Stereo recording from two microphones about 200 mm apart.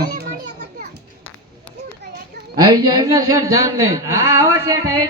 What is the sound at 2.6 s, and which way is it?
A man's voice, 20° right (ahead or behind).